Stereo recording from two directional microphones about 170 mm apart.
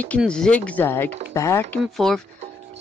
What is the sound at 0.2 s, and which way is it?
Speech, 5° left (ahead or behind).